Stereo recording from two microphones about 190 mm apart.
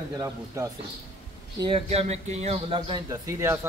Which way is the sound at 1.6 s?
30° right (ahead or behind).